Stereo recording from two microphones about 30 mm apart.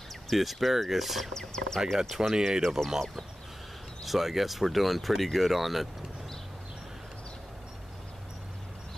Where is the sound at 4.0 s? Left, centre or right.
Centre.